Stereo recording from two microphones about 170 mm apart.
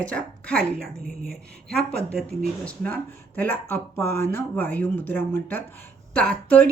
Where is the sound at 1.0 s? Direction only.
60° right (ahead or behind).